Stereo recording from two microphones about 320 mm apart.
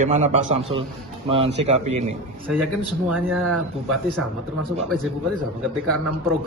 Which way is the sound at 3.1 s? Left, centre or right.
Centre.